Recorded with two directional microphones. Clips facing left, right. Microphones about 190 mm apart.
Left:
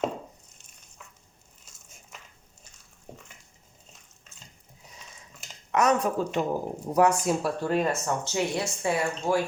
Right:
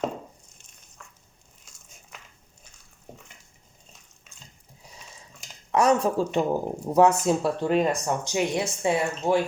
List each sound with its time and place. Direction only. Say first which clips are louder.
5.7 s speech: right 3 dB; 30° right (ahead or behind)